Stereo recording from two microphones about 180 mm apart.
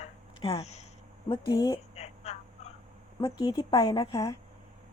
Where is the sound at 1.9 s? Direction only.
35° left (ahead or behind).